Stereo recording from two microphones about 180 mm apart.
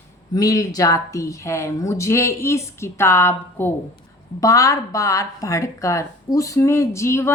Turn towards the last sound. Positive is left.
turn(degrees=15)  # may be behind; listen again after turning